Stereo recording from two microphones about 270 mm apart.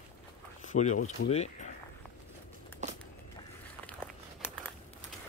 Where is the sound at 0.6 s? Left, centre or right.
Left.